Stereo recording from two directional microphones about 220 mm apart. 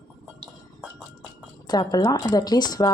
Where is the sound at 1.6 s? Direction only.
20° left (ahead or behind).